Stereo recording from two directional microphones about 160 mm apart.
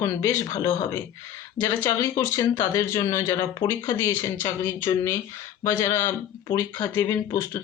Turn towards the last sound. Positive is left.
turn(degrees=20)  # may be behind; listen again after turning